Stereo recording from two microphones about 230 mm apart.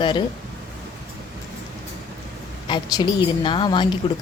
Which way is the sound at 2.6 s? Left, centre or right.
Centre.